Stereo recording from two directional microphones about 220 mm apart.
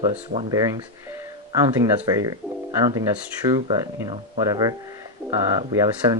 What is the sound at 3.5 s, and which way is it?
Speech, 20° right (ahead or behind).